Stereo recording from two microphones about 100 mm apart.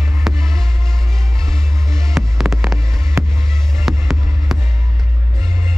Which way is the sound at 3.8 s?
Centre (ahead or behind).